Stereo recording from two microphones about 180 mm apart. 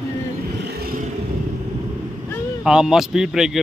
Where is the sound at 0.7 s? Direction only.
55° right (ahead or behind).